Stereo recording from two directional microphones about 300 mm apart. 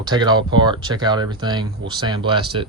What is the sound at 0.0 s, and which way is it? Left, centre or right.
Speech, centre.